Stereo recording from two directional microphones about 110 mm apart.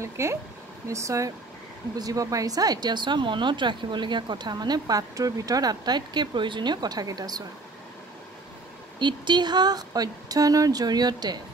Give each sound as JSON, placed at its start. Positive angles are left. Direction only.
{"t": 0.0, "sound": "speech", "side_deg": -25}
{"t": 9.0, "sound": "speech", "side_deg": -45}